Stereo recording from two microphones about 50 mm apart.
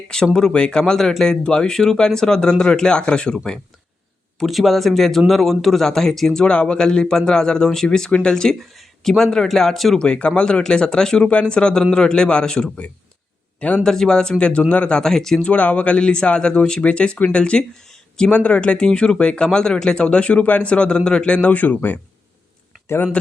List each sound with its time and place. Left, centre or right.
0.3 s speech: centre
1.3 s speech: centre
4.4 s speech: centre
10.0 s speech: left
13.8 s speech: centre
15.4 s speech: left